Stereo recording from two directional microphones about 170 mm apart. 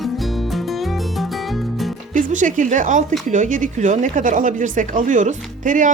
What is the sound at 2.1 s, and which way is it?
A woman's voice, 50° right (ahead or behind).